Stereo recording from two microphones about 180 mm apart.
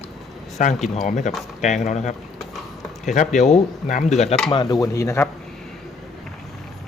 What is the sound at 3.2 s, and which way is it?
Speech, 40° left (ahead or behind).